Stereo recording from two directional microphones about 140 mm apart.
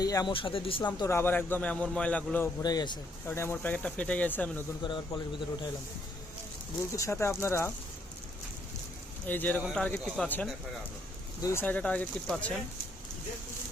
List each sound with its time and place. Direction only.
0.0 s speech: 25° left (ahead or behind)
0.3 s speech: 40° left (ahead or behind)
1.0 s a man's voice: 15° left (ahead or behind)
2.6 s speech: 30° left (ahead or behind)
3.2 s a man's voice: 15° left (ahead or behind)
4.8 s speech: 35° left (ahead or behind)
6.9 s speech: 20° left (ahead or behind)
9.2 s a man's voice: 15° left (ahead or behind)
11.4 s a man's voice: 15° left (ahead or behind)